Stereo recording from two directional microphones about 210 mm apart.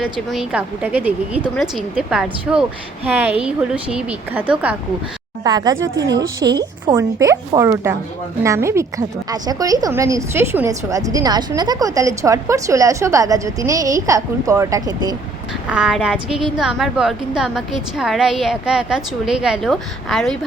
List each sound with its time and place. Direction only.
0.0 s a woman's voice: centre (ahead or behind)
5.4 s a woman's voice: 20° right (ahead or behind)
15.7 s a woman's voice: 5° right (ahead or behind)